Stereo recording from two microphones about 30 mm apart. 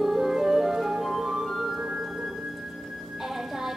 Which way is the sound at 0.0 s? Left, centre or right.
Centre.